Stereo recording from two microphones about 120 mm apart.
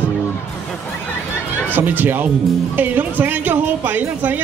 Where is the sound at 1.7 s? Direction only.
15° right (ahead or behind).